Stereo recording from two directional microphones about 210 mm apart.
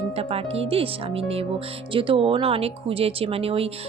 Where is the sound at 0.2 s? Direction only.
30° right (ahead or behind).